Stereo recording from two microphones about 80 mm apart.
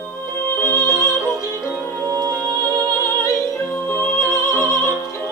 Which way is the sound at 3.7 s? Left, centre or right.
Left.